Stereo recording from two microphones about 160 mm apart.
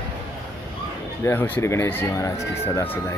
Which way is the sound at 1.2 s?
15° left (ahead or behind).